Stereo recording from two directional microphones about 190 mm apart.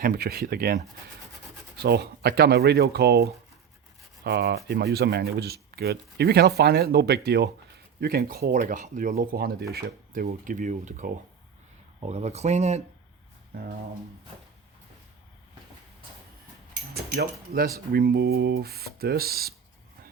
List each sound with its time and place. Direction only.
0.0 s speech: 50° right (ahead or behind)
1.8 s speech: 55° right (ahead or behind); by 12.8 s 35° right (ahead or behind)
16.9 s speech: 55° right (ahead or behind)